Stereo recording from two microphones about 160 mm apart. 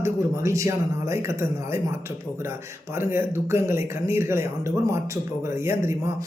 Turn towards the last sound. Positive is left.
turn(degrees=-15)  # may be behind; listen again after turning